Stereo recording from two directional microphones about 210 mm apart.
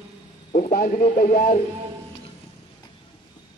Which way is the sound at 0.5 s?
35° left (ahead or behind).